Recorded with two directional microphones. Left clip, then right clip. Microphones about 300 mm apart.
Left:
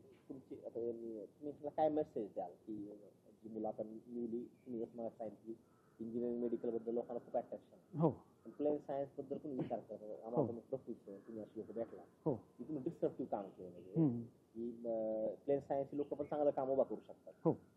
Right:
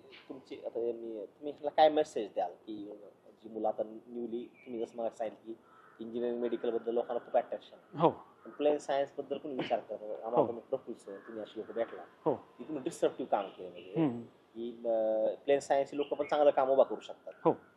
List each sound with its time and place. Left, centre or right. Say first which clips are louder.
0.3 s a sound: right 8 dB; right
1.4 s speech: right 11 dB; centre
4.6 s speech: right 8 dB; right
4.9 s speech: right 10 dB; centre